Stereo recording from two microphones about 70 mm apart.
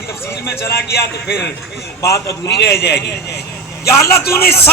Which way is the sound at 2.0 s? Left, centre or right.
Left.